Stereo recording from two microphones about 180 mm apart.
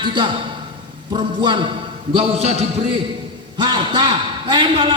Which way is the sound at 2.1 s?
35° right (ahead or behind).